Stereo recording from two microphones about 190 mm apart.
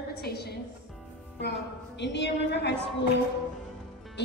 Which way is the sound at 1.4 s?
65° left (ahead or behind).